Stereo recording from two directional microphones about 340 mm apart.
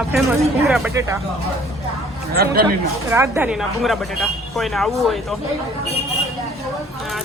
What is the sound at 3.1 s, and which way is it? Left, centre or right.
A woman's voice, centre.